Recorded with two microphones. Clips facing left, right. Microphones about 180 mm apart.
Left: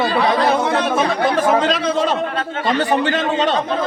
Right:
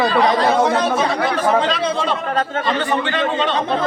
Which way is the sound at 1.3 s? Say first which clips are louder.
Left 1 dB; 45° left (ahead or behind).